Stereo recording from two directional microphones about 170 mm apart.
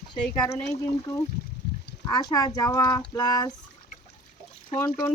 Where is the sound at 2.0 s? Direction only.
20° left (ahead or behind).